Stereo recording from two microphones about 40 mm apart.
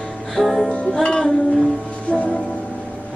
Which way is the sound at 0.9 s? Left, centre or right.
Centre.